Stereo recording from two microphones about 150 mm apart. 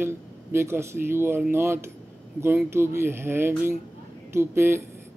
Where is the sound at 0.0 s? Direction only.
15° right (ahead or behind).